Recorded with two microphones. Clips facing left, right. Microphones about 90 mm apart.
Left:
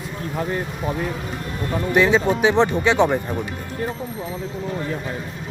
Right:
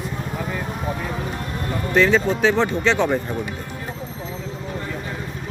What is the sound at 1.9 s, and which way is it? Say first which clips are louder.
Speech: even; 15° left (ahead or behind).